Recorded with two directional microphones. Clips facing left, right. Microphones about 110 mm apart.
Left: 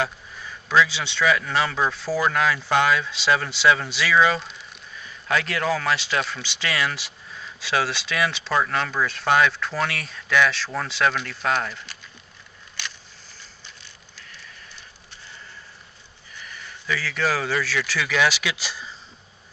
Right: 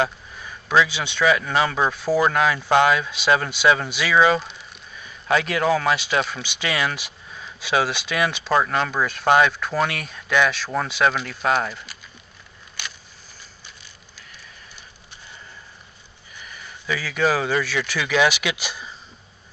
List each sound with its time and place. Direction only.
0.7 s speech: 15° right (ahead or behind)
16.3 s speech: 15° right (ahead or behind)